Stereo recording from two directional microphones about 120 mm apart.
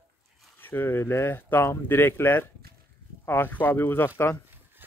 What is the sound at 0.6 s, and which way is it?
Speech, 15° left (ahead or behind).